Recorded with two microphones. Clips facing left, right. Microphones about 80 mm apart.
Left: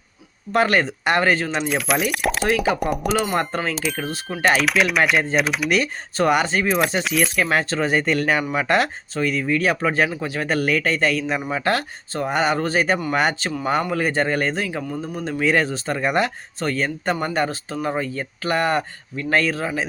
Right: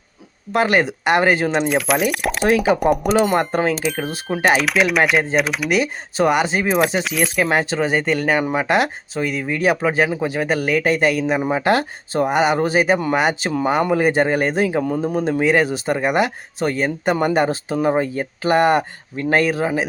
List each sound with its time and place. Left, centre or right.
0.5 s speech: centre
1.5 s speech: centre
3.5 s speech: centre
3.8 s speech: centre
11.5 s speech: right
15.4 s speech: centre